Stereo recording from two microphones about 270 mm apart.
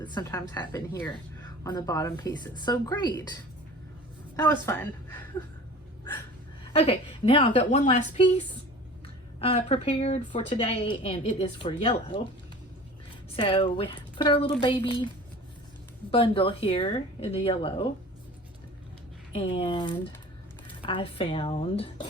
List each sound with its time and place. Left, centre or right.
0.0 s speech: centre
4.4 s speech: centre
6.7 s speech: left
13.3 s speech: centre
16.1 s speech: centre
19.3 s speech: left